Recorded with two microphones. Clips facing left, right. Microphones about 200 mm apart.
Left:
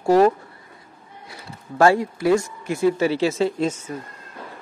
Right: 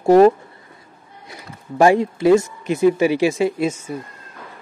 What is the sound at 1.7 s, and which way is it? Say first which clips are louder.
A man's voice: right 3 dB; 20° right (ahead or behind).